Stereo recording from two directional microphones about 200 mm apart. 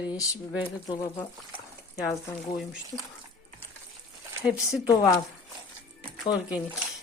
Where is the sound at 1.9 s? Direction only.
15° left (ahead or behind).